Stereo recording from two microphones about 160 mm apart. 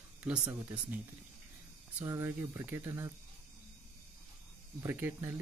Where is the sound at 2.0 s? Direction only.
15° right (ahead or behind).